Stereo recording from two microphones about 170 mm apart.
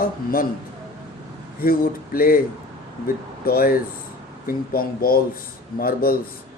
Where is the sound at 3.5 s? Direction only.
60° left (ahead or behind).